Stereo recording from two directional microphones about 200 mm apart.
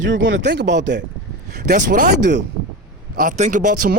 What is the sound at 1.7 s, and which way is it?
Speech, 40° right (ahead or behind).